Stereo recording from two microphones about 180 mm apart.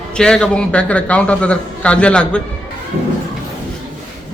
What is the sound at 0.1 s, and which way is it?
A man's voice, 5° left (ahead or behind).